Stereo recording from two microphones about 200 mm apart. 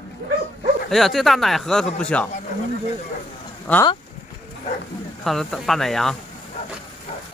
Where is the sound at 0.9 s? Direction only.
Centre (ahead or behind).